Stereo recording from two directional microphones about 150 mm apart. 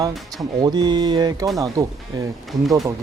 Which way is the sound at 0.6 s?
30° right (ahead or behind).